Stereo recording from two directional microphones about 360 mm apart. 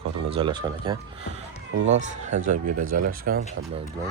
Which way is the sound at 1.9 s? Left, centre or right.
Right.